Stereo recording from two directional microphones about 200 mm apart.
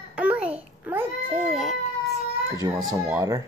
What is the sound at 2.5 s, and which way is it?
Speech, 20° right (ahead or behind).